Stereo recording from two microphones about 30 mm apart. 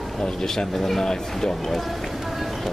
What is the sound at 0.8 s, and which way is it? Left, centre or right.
Speech, centre.